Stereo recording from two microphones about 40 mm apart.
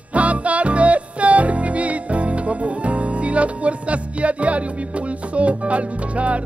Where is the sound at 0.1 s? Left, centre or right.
Right.